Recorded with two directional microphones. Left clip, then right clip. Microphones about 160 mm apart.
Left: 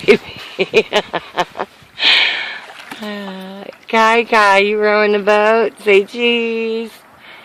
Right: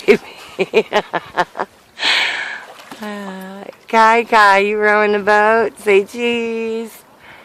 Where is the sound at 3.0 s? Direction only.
5° left (ahead or behind).